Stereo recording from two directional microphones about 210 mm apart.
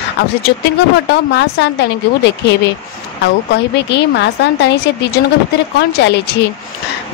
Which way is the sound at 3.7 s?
55° left (ahead or behind).